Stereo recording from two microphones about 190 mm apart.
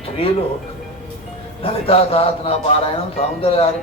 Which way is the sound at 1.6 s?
30° left (ahead or behind).